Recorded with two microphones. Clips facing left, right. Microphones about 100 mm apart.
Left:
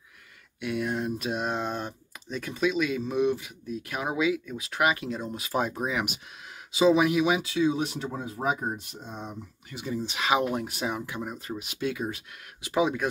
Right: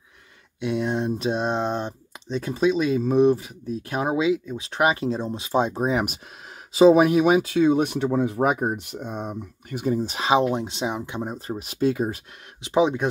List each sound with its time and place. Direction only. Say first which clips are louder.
0.6 s speech: right 5 dB; 25° right (ahead or behind); by 10.2 s 40° right (ahead or behind)
10.2 s speech: right 5 dB; 30° right (ahead or behind)
12.6 s speech: right 5 dB; 25° right (ahead or behind)